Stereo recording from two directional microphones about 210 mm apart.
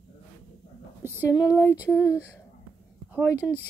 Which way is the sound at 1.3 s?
15° left (ahead or behind).